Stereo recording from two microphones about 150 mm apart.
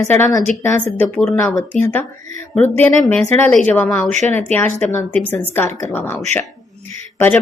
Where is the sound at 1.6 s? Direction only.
15° left (ahead or behind).